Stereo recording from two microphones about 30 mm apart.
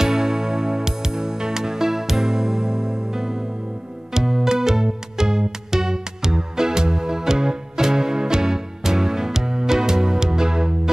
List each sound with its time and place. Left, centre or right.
0.0 s music: centre